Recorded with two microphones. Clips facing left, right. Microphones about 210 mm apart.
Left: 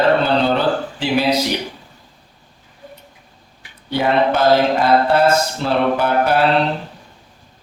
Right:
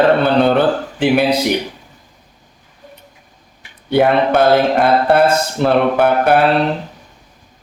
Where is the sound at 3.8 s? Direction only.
55° right (ahead or behind).